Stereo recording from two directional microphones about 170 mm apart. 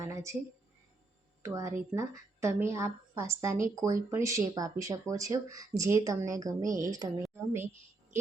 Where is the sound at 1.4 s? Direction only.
15° right (ahead or behind).